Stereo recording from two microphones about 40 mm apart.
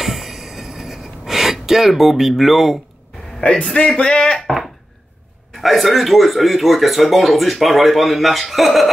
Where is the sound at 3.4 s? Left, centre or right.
Left.